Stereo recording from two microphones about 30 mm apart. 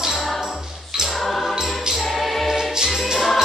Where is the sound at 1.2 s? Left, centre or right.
Centre.